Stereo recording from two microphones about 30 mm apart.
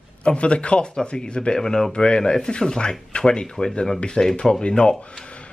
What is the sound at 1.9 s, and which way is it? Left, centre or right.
Speech, left.